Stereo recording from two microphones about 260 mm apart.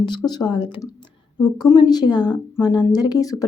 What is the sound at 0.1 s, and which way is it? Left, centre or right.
Speech, centre.